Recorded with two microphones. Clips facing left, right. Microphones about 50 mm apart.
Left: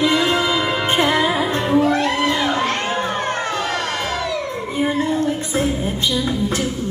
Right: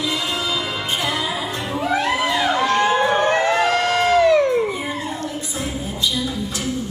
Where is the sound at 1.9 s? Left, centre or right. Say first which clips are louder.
Left 1 dB; centre.